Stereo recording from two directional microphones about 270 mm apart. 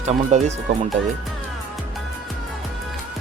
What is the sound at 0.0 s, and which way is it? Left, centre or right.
Speech, right.